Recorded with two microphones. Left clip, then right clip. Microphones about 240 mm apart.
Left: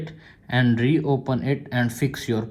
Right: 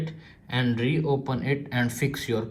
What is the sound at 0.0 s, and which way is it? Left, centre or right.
Speech, left.